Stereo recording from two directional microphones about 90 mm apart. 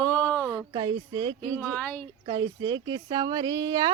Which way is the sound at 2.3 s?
55° right (ahead or behind).